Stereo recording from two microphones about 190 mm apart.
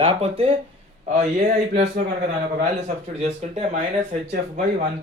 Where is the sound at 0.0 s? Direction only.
30° right (ahead or behind).